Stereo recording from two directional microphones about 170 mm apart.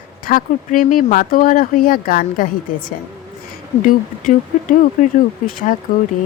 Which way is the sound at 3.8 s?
50° left (ahead or behind).